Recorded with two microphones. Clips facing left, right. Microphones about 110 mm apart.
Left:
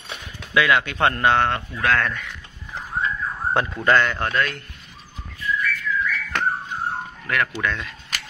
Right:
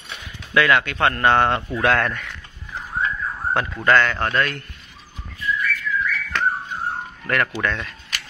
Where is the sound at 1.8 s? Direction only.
20° right (ahead or behind).